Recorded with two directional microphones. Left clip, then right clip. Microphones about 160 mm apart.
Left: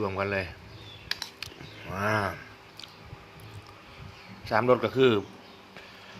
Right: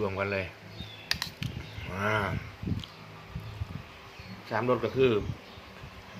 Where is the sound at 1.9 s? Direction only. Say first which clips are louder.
Left 2 dB; 25° left (ahead or behind).